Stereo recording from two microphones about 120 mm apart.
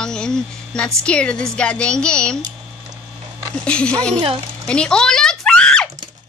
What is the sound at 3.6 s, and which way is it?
Speech, 10° left (ahead or behind).